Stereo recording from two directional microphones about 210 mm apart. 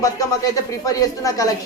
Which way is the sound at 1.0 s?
15° left (ahead or behind).